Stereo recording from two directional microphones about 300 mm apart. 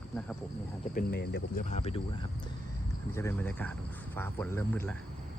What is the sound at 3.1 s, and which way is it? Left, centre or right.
Speech, centre.